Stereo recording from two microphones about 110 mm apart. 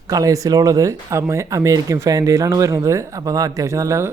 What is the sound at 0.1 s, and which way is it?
Speech, 30° right (ahead or behind).